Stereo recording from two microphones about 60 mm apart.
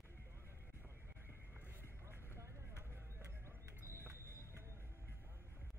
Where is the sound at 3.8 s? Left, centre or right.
Right.